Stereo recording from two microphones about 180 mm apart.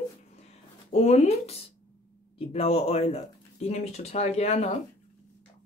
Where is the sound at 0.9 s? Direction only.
40° left (ahead or behind).